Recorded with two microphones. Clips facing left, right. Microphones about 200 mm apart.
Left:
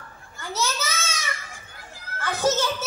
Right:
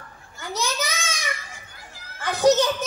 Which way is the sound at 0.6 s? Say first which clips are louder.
Even; 15° right (ahead or behind).